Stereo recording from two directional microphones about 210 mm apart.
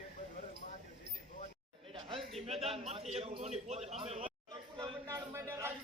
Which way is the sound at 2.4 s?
30° right (ahead or behind).